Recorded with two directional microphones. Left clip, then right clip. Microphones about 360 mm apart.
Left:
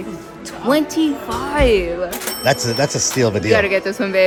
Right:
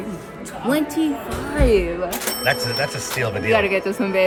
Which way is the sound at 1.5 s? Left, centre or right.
Centre.